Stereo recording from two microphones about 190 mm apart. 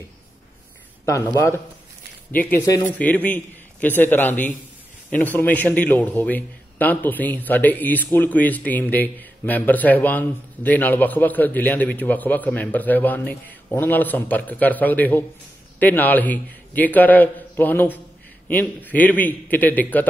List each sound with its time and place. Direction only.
1.0 s a man's voice: 15° left (ahead or behind)